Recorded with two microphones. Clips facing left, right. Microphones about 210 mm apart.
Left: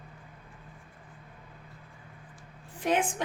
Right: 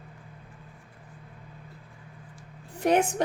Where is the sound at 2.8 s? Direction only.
40° right (ahead or behind).